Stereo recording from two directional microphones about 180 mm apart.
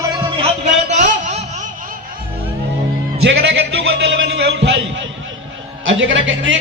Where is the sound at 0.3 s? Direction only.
35° right (ahead or behind).